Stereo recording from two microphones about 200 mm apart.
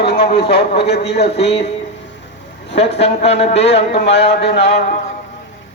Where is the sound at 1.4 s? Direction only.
30° left (ahead or behind).